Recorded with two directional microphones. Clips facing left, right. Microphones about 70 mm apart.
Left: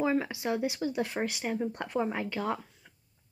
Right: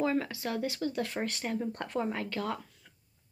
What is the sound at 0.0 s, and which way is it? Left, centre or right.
Speech, centre.